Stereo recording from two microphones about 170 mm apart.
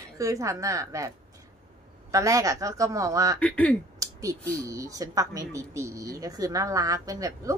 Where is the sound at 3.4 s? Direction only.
10° left (ahead or behind).